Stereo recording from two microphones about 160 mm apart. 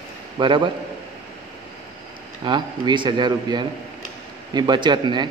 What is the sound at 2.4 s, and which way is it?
A man's voice, 30° right (ahead or behind).